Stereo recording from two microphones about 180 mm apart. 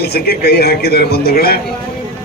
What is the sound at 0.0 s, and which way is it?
Speech, 60° left (ahead or behind).